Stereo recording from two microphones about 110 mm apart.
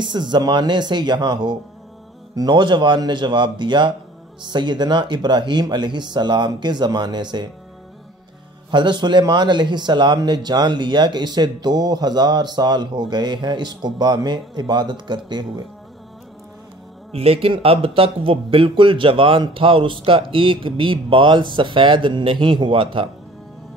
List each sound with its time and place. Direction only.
0.0 s speech: 45° right (ahead or behind)
8.6 s speech: 45° right (ahead or behind)
17.1 s speech: 65° right (ahead or behind)